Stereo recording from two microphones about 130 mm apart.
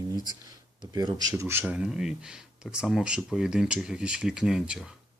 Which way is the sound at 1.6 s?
5° right (ahead or behind).